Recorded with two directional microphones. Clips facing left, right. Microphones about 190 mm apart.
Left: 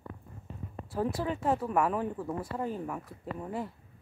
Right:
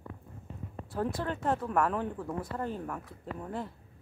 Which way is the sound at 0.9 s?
5° left (ahead or behind).